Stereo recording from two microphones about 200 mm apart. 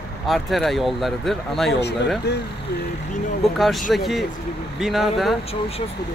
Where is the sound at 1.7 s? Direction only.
55° left (ahead or behind).